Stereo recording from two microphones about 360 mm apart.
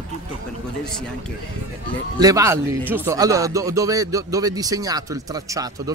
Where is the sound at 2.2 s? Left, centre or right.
Centre.